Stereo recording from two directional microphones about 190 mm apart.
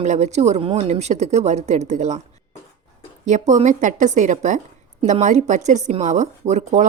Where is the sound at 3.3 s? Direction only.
40° right (ahead or behind).